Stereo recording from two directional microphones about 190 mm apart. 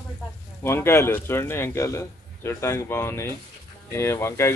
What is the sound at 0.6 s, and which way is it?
A man's voice, 10° left (ahead or behind).